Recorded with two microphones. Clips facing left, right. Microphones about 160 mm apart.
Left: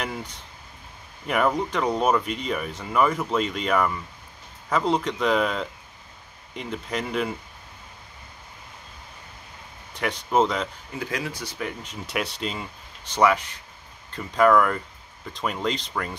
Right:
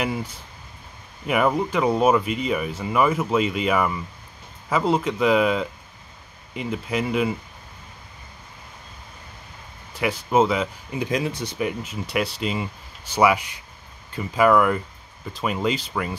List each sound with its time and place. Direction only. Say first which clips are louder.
0.0 s speech: right 5 dB; 5° right (ahead or behind)
9.9 s speech: right 2 dB; 5° right (ahead or behind)
11.0 s speech: right 6 dB; 20° right (ahead or behind)
11.8 s speech: right 4 dB; centre (ahead or behind)